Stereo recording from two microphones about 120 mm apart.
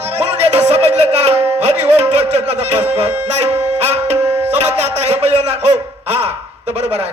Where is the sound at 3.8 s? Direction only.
60° right (ahead or behind).